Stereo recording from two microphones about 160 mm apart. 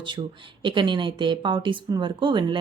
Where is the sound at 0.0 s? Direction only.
30° right (ahead or behind).